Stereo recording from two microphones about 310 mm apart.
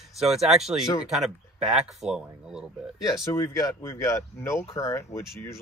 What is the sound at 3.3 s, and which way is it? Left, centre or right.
Speech, centre.